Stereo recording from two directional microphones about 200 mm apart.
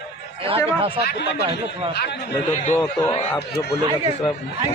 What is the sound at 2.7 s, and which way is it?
Speech, 15° left (ahead or behind).